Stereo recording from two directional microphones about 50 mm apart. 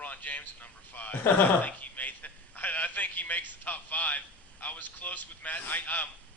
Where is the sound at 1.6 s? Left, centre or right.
Left.